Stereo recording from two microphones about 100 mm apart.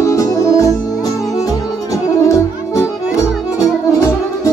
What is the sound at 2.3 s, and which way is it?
Music, 30° left (ahead or behind).